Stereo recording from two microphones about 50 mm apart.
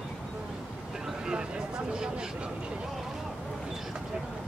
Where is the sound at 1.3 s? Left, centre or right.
Centre.